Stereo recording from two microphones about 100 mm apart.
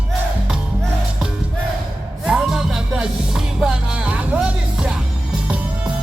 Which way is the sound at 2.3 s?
5° right (ahead or behind).